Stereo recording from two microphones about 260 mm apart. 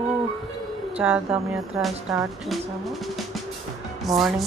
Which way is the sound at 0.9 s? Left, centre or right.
Centre.